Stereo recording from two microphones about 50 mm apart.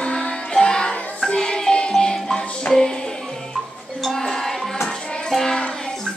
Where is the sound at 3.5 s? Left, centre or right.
Centre.